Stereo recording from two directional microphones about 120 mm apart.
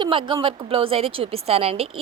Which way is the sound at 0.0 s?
45° right (ahead or behind).